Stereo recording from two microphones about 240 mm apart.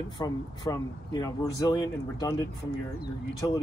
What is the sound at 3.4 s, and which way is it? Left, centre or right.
Speech, centre.